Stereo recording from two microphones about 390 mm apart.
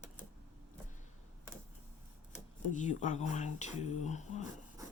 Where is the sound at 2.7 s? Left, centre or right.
Centre.